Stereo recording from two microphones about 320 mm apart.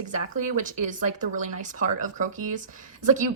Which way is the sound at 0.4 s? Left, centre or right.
Right.